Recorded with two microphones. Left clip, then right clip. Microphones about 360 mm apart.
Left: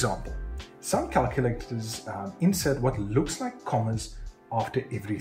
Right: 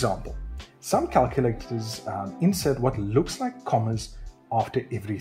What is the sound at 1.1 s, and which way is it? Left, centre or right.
Speech, right.